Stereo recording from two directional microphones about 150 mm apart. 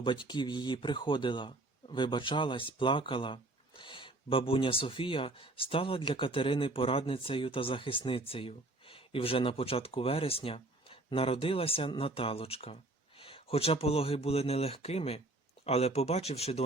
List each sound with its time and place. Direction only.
0.0 s speech: 30° left (ahead or behind)